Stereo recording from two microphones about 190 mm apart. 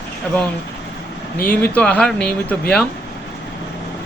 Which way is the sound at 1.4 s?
5° left (ahead or behind).